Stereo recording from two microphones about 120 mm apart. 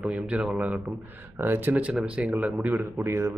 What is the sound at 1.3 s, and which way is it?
Speech, 15° right (ahead or behind).